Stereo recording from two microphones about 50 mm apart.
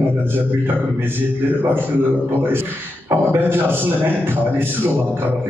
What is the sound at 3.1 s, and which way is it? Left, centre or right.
A man's voice, right.